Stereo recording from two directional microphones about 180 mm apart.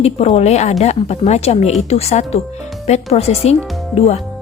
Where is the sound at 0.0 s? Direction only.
35° left (ahead or behind).